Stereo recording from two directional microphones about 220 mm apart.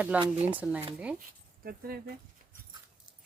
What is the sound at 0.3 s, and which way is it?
Speech, 30° right (ahead or behind).